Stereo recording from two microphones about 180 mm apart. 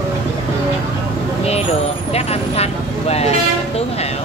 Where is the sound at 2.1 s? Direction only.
35° left (ahead or behind).